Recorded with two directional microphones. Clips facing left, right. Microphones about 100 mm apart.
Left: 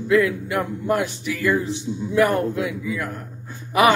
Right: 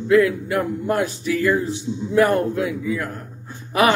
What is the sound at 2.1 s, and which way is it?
Speech, 40° right (ahead or behind).